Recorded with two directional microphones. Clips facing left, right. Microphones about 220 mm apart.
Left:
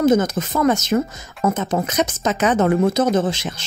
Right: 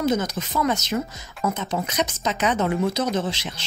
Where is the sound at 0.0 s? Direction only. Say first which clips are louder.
Left 7 dB; 50° left (ahead or behind).